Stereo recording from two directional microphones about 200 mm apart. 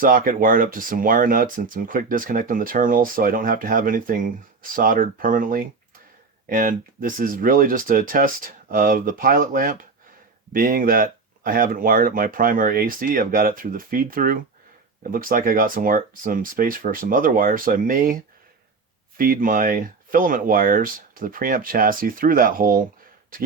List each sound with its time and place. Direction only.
0.0 s speech: 45° right (ahead or behind)